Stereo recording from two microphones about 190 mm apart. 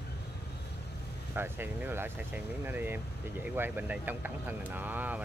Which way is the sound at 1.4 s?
10° right (ahead or behind).